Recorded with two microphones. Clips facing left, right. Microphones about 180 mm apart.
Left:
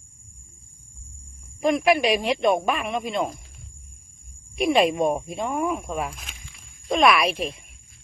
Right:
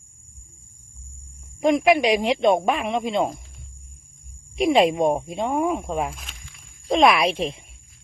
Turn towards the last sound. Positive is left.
turn(degrees=-25)  # may be behind; listen again after turning